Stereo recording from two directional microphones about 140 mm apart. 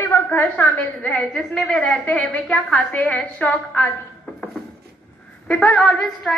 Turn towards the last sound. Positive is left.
turn(degrees=5)  # may be behind; listen again after turning